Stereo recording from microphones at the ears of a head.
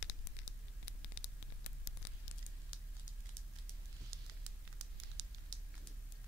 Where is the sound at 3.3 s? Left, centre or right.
Right.